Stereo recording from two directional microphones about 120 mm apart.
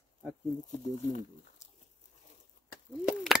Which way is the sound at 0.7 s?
90° left.